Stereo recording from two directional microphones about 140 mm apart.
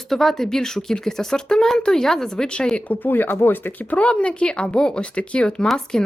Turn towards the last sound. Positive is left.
turn(degrees=5)  # may be behind; listen again after turning